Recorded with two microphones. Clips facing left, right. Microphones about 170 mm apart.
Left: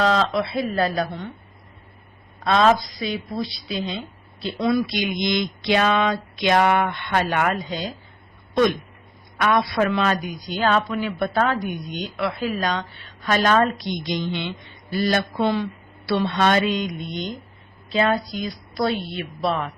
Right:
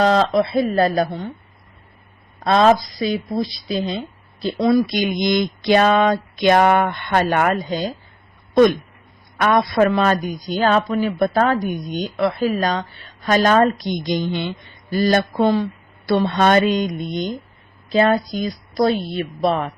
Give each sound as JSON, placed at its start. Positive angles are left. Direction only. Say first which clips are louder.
{"t": 0.0, "sound": "a man's voice", "louder": "right 5 dB", "side_deg": -40}
{"t": 2.4, "sound": "a woman's voice", "louder": "right 3 dB", "side_deg": -40}
{"t": 9.4, "sound": "a man's voice", "louder": "right 4 dB", "side_deg": -45}